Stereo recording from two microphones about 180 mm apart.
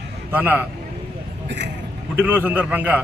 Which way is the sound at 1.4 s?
75° right (ahead or behind).